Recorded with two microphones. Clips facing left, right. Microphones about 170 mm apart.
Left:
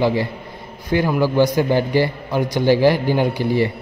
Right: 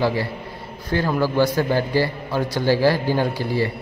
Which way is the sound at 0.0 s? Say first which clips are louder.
Left 3 dB; 20° left (ahead or behind).